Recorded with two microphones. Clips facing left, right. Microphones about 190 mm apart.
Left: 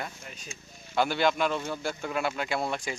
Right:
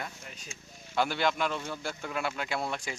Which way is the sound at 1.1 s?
15° left (ahead or behind).